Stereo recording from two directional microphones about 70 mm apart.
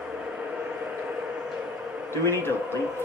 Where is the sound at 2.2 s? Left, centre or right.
Left.